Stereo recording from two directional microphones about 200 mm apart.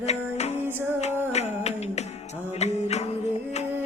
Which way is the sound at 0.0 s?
35° left (ahead or behind).